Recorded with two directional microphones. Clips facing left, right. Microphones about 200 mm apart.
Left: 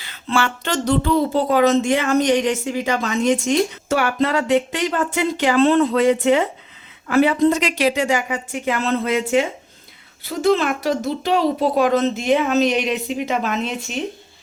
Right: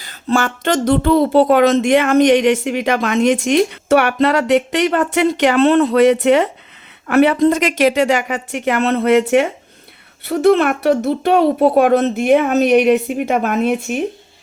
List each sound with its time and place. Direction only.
0.0 s speech: 40° right (ahead or behind)